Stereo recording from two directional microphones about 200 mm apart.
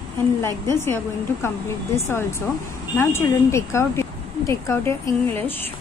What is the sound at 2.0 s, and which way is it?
A woman's voice, 15° left (ahead or behind).